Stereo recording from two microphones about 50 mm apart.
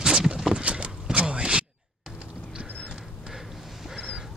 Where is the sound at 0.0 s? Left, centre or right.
Centre.